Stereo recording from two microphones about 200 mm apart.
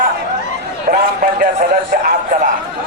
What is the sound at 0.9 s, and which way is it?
A man's voice, 45° right (ahead or behind).